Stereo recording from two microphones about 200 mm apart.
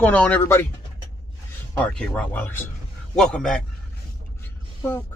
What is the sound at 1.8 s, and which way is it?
Speech, 5° left (ahead or behind).